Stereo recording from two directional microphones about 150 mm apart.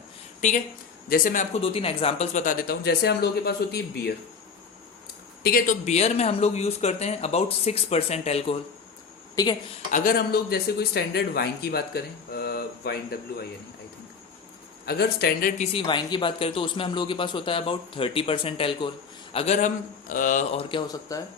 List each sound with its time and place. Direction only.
0.4 s speech: 55° left (ahead or behind)
1.0 s a man's voice: 70° left (ahead or behind)
1.5 s speech: 40° left (ahead or behind); by 4.1 s 90° left
5.4 s speech: 75° left (ahead or behind)
5.8 s speech: 50° left (ahead or behind)
9.3 s speech: 25° left (ahead or behind)
9.9 s speech: 65° left (ahead or behind); by 13.1 s 90° left
14.8 s speech: 90° left; by 15.6 s 65° left (ahead or behind)
15.6 s speech: 35° left (ahead or behind); by 20.6 s 55° left (ahead or behind)
20.6 s speech: 35° left (ahead or behind)